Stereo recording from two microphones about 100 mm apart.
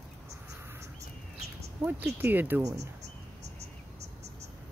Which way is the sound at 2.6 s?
35° right (ahead or behind).